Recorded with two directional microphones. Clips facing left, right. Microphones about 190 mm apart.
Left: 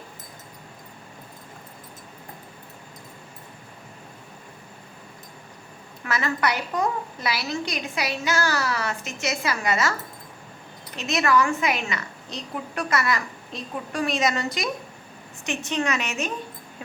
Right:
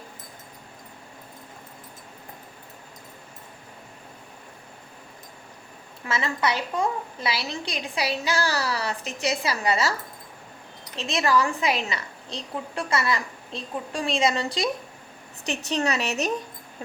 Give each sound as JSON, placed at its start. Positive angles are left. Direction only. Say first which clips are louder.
{"t": 6.1, "sound": "a woman's voice", "louder": "left 1 dB", "side_deg": -25}
{"t": 10.9, "sound": "a woman's voice", "louder": "left 1 dB", "side_deg": -30}